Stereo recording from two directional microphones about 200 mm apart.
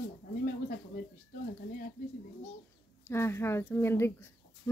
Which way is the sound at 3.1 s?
10° left (ahead or behind).